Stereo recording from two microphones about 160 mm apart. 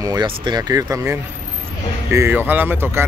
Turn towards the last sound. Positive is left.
turn(degrees=-10)  # may be behind; listen again after turning